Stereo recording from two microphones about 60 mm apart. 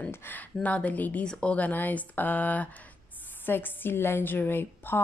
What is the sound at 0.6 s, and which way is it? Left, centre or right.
A woman's voice, left.